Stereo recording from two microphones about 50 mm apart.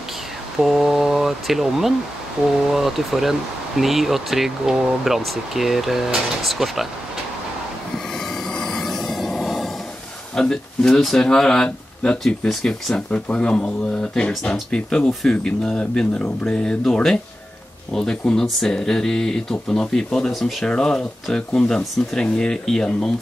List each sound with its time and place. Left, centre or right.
0.6 s speech: centre
8.1 s train: centre
10.3 s speech: centre
20.6 s speech: centre